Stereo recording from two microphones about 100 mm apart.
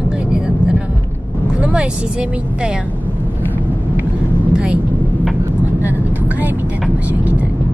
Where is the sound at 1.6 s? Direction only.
10° right (ahead or behind).